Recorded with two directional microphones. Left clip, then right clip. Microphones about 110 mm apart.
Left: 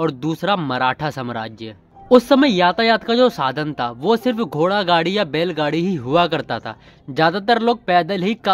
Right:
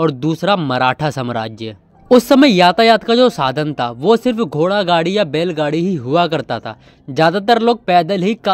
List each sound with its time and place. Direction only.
0.0 s speech: 25° right (ahead or behind)
2.0 s speech: 55° right (ahead or behind); by 8.4 s 25° right (ahead or behind)